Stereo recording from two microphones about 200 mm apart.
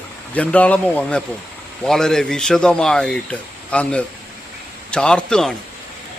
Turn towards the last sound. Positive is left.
turn(degrees=5)  # may be behind; listen again after turning